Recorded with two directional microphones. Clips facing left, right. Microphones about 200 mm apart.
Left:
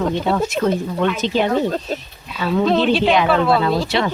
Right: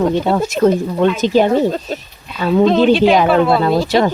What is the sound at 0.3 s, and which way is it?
Speech, 40° right (ahead or behind).